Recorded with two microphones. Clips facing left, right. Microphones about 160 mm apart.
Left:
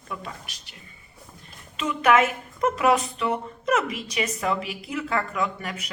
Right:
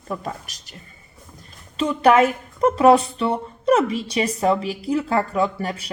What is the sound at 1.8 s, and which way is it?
Speech, 35° right (ahead or behind).